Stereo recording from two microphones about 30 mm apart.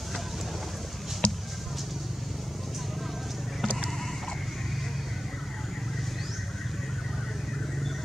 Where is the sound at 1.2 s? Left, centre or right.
Left.